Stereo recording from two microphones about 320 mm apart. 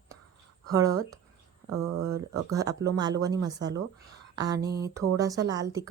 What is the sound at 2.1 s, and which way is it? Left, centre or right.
Speech, centre.